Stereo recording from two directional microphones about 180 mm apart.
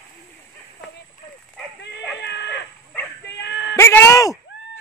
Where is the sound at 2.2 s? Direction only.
75° left (ahead or behind).